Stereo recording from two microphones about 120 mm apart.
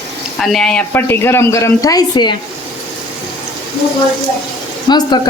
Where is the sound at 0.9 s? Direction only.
20° left (ahead or behind); by 2.3 s 35° left (ahead or behind).